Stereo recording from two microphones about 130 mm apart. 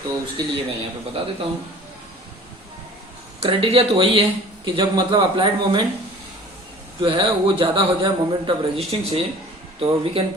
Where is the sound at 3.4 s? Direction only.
45° right (ahead or behind).